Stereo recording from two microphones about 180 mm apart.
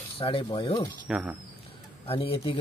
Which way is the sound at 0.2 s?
30° left (ahead or behind).